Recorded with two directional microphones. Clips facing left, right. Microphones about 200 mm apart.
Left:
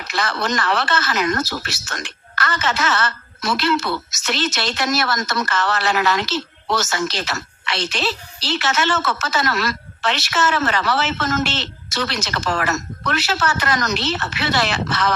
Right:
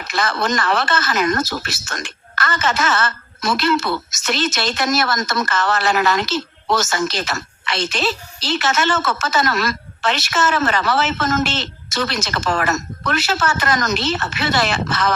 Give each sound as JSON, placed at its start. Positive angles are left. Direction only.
{"t": 0.1, "sound": "speech", "side_deg": -45}